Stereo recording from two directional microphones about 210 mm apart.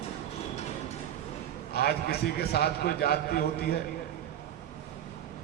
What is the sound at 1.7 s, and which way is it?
A man's voice, 50° left (ahead or behind).